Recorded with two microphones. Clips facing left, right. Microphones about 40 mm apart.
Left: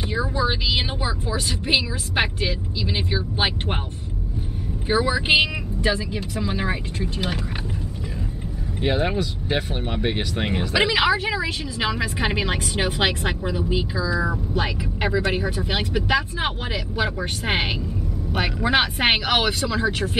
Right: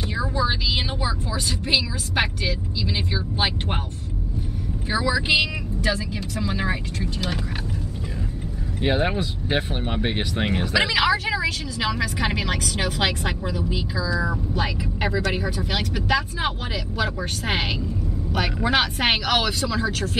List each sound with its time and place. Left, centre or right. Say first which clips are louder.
0.2 s a woman's voice: even; centre
4.8 s a woman's voice: left 2 dB; left; by 7.1 s centre
8.8 s speech: even; centre
10.7 s a woman's voice: left 1 dB; centre